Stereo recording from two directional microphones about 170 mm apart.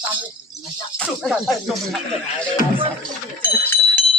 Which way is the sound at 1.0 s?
Centre (ahead or behind).